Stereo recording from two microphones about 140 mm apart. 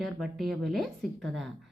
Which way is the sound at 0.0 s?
Centre (ahead or behind).